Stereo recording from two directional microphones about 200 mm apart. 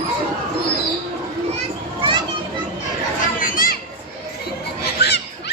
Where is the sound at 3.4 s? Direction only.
45° left (ahead or behind).